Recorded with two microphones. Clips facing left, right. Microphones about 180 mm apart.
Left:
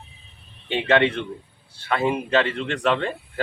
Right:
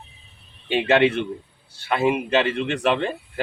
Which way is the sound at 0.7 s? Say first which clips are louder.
Right 2 dB; 10° right (ahead or behind).